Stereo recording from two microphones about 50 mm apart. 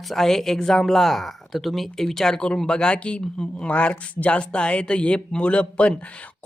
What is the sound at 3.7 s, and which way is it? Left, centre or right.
Speech, left.